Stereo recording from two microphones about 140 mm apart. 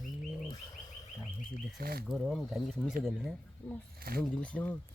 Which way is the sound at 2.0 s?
Centre (ahead or behind).